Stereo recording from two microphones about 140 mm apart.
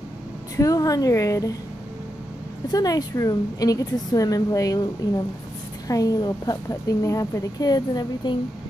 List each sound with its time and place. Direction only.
0.6 s a woman's voice: 25° left (ahead or behind)
2.7 s a woman's voice: 25° left (ahead or behind)